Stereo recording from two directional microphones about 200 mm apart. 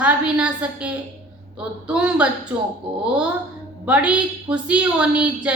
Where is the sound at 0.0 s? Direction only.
5° right (ahead or behind).